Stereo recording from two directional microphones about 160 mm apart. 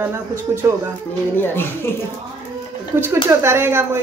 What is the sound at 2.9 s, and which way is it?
Speech, 15° right (ahead or behind).